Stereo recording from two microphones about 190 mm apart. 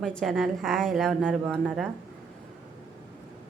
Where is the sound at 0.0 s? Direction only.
5° left (ahead or behind).